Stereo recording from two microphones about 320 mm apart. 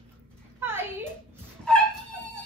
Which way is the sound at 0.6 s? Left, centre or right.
Centre.